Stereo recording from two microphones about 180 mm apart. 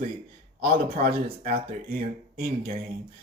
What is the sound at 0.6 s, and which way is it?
A man's voice, 55° right (ahead or behind).